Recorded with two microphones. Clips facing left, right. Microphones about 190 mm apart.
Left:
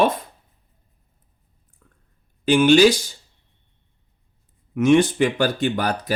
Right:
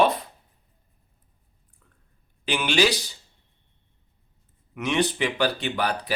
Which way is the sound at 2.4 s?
45° left (ahead or behind).